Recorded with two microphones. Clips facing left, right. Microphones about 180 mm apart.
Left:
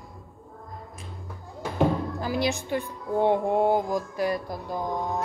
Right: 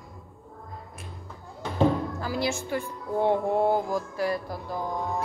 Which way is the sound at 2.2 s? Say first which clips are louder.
Left 2 dB; 15° left (ahead or behind).